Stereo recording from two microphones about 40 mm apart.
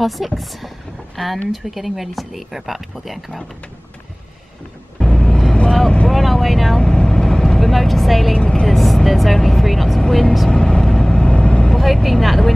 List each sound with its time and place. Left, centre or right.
0.0 s speech: centre
4.9 s vehicle: centre
6.8 s vehicle: centre
8.4 s vehicle: centre
8.6 s speech: centre
10.5 s vehicle: centre
11.7 s speech: centre